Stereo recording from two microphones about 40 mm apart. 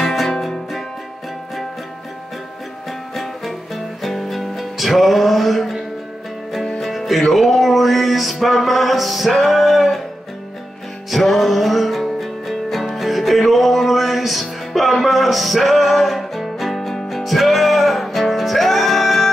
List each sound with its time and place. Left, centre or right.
0.0 s music: centre
3.2 s music: centre
6.8 s music: centre
11.1 s music: centre